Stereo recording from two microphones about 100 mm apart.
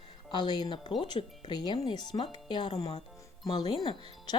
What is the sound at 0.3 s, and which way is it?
Speech, 45° left (ahead or behind).